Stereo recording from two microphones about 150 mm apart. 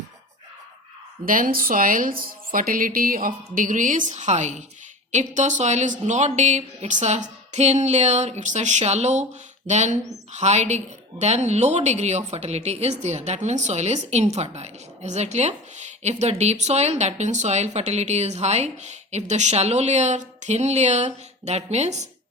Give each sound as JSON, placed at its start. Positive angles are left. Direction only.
{"t": 1.2, "sound": "a woman's voice", "side_deg": -70}